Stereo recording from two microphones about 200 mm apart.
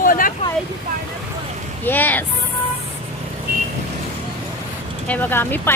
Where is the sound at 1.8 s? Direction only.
10° left (ahead or behind).